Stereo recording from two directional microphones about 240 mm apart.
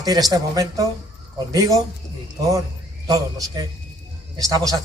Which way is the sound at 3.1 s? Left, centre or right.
Centre.